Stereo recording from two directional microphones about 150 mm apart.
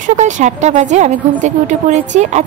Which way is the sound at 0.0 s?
55° right (ahead or behind).